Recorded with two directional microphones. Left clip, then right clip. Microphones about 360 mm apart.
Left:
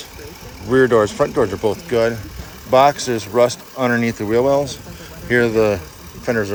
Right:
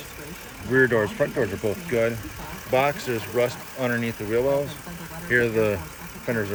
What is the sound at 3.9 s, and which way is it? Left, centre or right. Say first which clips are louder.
Speech: left 8 dB; left.